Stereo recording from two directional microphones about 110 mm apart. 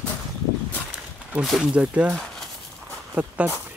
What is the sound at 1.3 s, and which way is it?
Speech, 5° right (ahead or behind).